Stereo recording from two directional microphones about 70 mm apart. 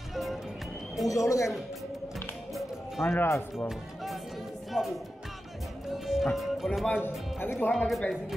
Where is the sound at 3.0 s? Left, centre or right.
Left.